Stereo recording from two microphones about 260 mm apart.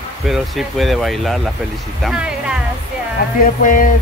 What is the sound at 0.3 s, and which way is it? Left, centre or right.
Speech, centre.